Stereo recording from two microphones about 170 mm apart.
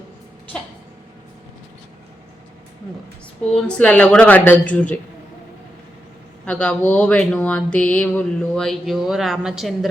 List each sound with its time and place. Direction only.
3.5 s speech: 5° left (ahead or behind)
6.4 s speech: 5° left (ahead or behind)